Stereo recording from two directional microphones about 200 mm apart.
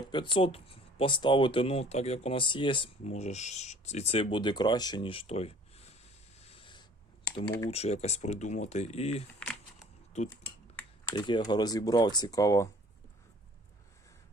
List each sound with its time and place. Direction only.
0.1 s speech: 25° left (ahead or behind)
6.4 s a sound: 30° left (ahead or behind)
7.3 s speech: 20° left (ahead or behind)
7.7 s speech: 30° left (ahead or behind)
11.1 s speech: 25° left (ahead or behind)